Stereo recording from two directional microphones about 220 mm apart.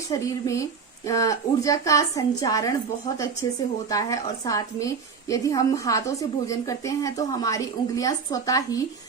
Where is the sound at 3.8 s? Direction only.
15° left (ahead or behind).